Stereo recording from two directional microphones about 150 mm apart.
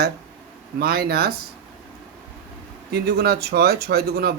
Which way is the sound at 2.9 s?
90° right.